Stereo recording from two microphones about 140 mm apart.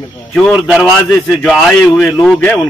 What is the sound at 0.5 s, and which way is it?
A man's voice, 5° right (ahead or behind).